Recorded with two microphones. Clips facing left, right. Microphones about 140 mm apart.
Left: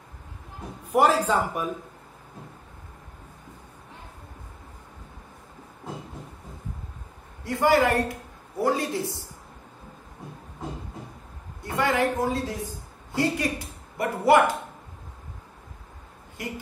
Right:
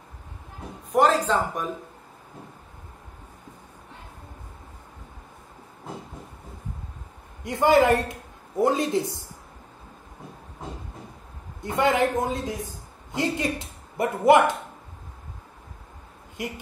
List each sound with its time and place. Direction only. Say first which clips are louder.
0.9 s a man's voice: even; 10° left (ahead or behind)
7.4 s speech: right 2 dB; 20° right (ahead or behind)
11.6 s a woman's voice: right 2 dB; 20° right (ahead or behind)
16.4 s speech: right 2 dB; 20° right (ahead or behind)